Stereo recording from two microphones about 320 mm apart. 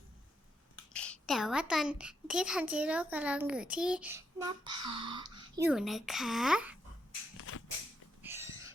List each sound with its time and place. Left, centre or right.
0.9 s a child's voice: centre
7.3 s a sound: left
8.2 s owl: centre